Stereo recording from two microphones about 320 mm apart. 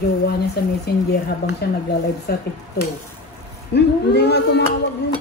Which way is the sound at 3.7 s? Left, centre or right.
Left.